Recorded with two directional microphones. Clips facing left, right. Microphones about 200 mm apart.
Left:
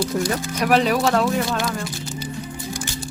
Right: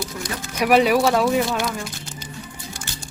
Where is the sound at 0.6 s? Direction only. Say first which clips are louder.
Right 3 dB; 10° right (ahead or behind).